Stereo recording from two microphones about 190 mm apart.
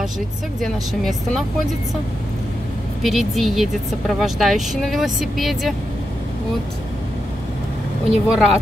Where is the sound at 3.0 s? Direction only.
Centre (ahead or behind).